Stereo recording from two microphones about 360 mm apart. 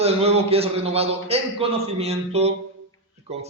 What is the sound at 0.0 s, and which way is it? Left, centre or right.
A man's voice, centre.